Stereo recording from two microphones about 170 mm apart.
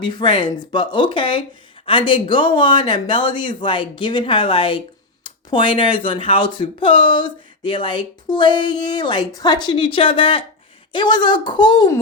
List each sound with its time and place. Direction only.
0.0 s speech: 25° left (ahead or behind)